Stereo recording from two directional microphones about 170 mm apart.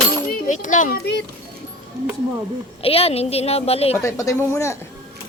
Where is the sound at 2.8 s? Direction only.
35° left (ahead or behind).